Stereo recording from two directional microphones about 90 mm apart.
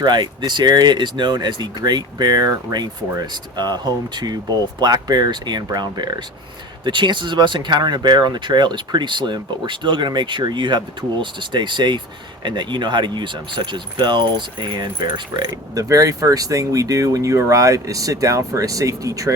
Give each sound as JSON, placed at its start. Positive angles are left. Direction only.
{"t": 0.0, "sound": "speech", "side_deg": -55}